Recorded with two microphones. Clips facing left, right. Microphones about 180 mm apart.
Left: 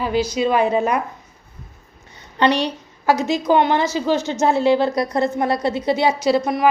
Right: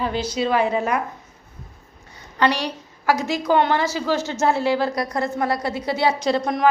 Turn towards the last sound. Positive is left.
turn(degrees=5)  # may be behind; listen again after turning